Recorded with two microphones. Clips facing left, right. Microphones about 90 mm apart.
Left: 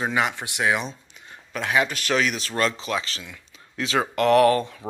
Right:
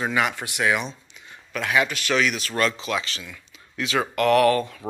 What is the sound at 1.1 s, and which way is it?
Speech, 40° left (ahead or behind).